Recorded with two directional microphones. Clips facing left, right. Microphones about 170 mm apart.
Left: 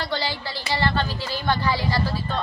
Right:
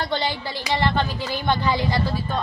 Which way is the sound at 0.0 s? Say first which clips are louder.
Right 2 dB; 20° right (ahead or behind).